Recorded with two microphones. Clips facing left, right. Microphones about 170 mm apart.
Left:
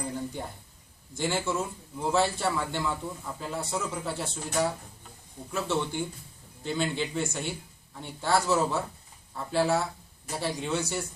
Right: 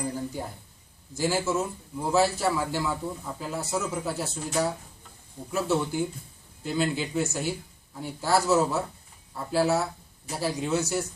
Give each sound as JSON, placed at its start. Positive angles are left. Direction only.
{"t": 1.1, "sound": "a man's voice", "side_deg": -5}